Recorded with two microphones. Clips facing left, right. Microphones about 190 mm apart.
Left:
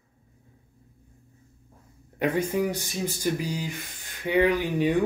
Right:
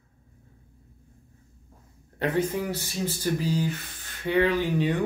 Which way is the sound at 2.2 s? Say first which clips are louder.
Left 1 dB; 15° left (ahead or behind).